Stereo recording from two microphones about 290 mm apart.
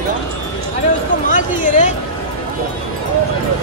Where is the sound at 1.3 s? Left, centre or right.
Left.